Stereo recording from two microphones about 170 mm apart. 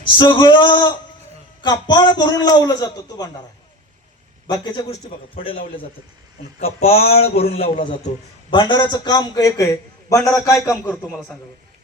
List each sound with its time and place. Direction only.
0.0 s a man's voice: 30° left (ahead or behind)
4.4 s a man's voice: 25° left (ahead or behind)
6.6 s a man's voice: 40° left (ahead or behind); by 10.9 s 15° left (ahead or behind)